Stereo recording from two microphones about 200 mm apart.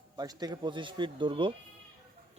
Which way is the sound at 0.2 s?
20° right (ahead or behind).